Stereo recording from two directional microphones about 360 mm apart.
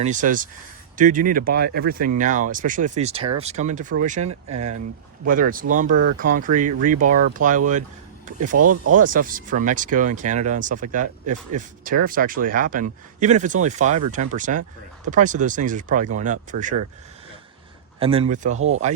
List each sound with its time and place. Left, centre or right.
0.0 s speech: right
8.5 s speech: right
9.0 s speech: right
18.0 s speech: centre